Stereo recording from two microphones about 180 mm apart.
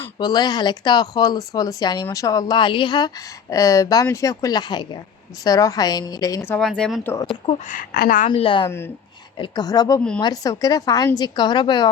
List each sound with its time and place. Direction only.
0.2 s a woman's voice: 20° left (ahead or behind)
7.4 s speech: 45° left (ahead or behind)
8.3 s a woman's voice: 30° left (ahead or behind)